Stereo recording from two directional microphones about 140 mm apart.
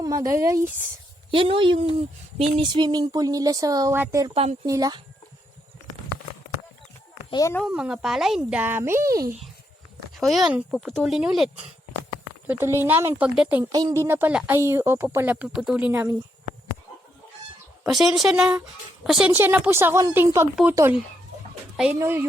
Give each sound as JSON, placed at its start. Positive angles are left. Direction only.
{"t": 0.0, "sound": "speech", "side_deg": -25}
{"t": 1.3, "sound": "a woman's voice", "side_deg": -40}
{"t": 7.3, "sound": "speech", "side_deg": 30}
{"t": 7.6, "sound": "speech", "side_deg": -5}
{"t": 10.2, "sound": "speech", "side_deg": 0}
{"t": 12.5, "sound": "speech", "side_deg": -15}
{"t": 13.7, "sound": "speech", "side_deg": -25}
{"t": 17.8, "sound": "speech", "side_deg": 0}
{"t": 19.3, "sound": "speech", "side_deg": -15}
{"t": 21.9, "sound": "speech", "side_deg": -15}